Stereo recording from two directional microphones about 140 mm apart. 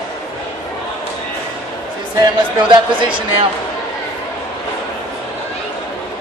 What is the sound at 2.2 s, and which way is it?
Speech, 35° right (ahead or behind).